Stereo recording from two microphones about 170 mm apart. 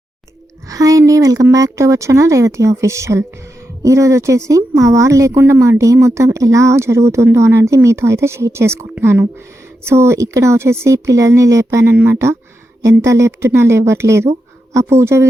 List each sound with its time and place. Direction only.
0.7 s speech: 20° right (ahead or behind)